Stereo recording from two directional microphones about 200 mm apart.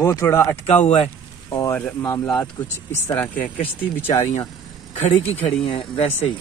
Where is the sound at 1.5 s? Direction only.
15° left (ahead or behind).